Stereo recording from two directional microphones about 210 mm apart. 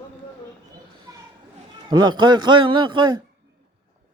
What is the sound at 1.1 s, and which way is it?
Children playing, 15° right (ahead or behind).